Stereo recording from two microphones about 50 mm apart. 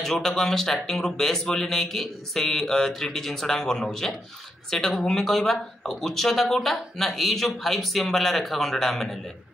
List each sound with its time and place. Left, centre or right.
0.0 s speech: centre